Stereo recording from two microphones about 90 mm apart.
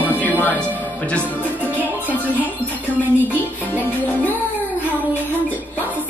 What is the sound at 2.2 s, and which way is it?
Music, 20° right (ahead or behind).